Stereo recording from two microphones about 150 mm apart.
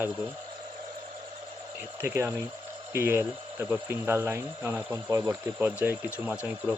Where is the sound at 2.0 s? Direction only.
15° right (ahead or behind).